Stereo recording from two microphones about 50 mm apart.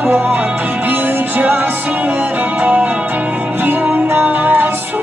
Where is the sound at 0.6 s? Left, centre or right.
Right.